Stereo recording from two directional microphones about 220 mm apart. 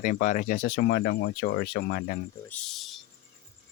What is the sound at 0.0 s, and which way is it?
Speech, 35° left (ahead or behind).